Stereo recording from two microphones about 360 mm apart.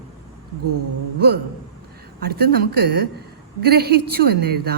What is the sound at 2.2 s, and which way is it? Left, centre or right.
Speech, right.